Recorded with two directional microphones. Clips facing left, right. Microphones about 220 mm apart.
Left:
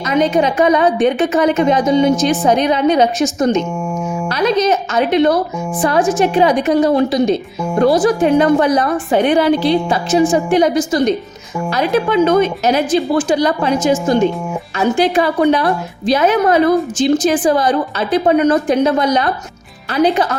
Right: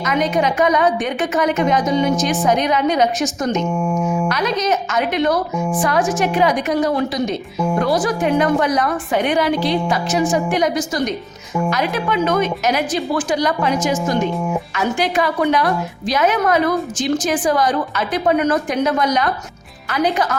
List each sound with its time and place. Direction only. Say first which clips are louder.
0.0 s a woman's voice: left 4 dB; 30° left (ahead or behind)